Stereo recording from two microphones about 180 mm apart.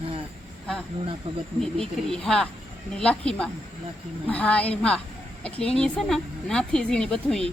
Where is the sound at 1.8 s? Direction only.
5° left (ahead or behind).